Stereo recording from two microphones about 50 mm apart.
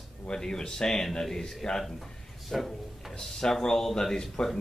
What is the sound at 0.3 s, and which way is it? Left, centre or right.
Speech, centre.